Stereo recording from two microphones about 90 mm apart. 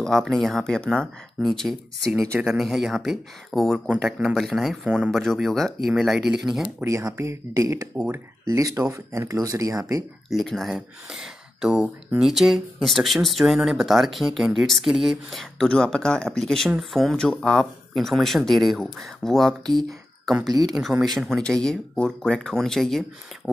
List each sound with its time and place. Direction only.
0.0 s speech: 5° left (ahead or behind)
4.8 s speech: 10° right (ahead or behind)
5.1 s speech: 5° left (ahead or behind)
6.8 s speech: 35° right (ahead or behind)
10.3 s speech: centre (ahead or behind)
15.6 s speech: 10° left (ahead or behind)